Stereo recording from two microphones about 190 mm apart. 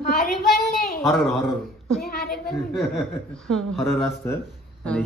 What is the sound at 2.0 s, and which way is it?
Speech, 55° left (ahead or behind).